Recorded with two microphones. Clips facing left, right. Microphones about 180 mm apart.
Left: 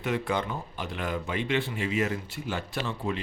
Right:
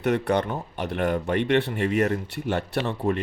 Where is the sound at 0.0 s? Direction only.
65° right (ahead or behind).